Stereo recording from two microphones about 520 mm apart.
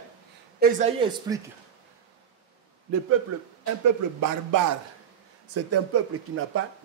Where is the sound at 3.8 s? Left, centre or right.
Right.